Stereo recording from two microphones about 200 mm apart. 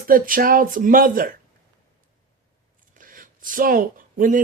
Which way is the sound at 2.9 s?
45° right (ahead or behind).